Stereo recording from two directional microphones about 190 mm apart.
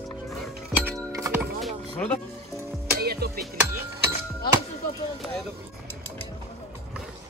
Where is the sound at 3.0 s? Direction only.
55° right (ahead or behind).